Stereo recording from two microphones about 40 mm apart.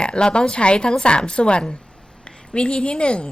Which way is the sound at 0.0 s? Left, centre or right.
Left.